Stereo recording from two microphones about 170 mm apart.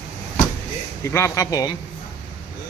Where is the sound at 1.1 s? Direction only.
15° left (ahead or behind).